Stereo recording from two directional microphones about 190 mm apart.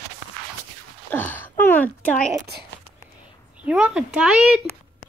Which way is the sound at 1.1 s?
10° left (ahead or behind).